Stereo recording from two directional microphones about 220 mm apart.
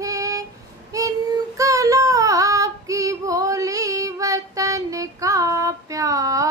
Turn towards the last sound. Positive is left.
turn(degrees=-15)  # may be behind; listen again after turning